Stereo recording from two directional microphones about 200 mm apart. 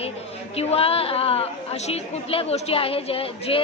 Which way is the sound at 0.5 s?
30° left (ahead or behind).